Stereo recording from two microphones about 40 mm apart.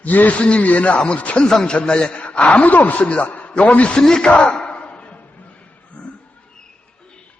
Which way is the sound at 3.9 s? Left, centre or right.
Centre.